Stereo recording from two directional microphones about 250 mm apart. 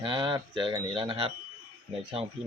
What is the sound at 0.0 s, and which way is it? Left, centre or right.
Speech, centre.